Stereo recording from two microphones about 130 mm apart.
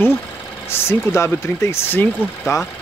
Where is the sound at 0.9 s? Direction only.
20° left (ahead or behind).